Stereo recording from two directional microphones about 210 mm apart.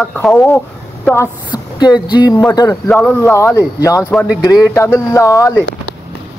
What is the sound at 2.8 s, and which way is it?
Speech, 5° left (ahead or behind).